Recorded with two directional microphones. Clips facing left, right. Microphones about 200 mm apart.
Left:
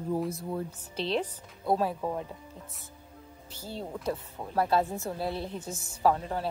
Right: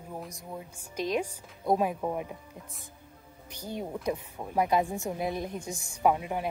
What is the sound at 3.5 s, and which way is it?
Speech, 15° right (ahead or behind).